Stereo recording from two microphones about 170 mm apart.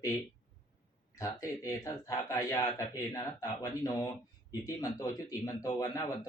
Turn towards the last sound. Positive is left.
turn(degrees=20)  # may be behind; listen again after turning